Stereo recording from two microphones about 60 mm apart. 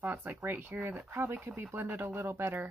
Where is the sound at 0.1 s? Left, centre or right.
Right.